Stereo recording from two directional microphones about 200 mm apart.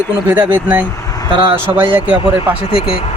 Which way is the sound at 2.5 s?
25° left (ahead or behind).